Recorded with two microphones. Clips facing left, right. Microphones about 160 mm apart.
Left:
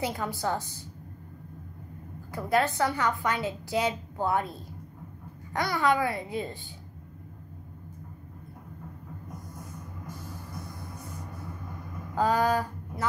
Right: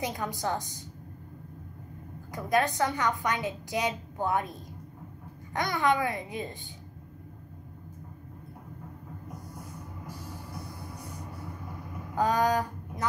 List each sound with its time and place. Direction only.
0.0 s a woman's voice: 15° right (ahead or behind)
2.3 s a woman's voice: 15° right (ahead or behind)
12.2 s speech: 20° right (ahead or behind)